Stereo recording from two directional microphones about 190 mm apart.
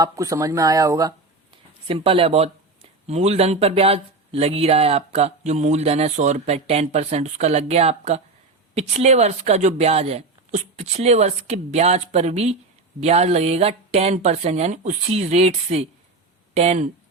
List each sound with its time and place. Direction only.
0.0 s speech: 15° right (ahead or behind)
1.9 s speech: 30° right (ahead or behind)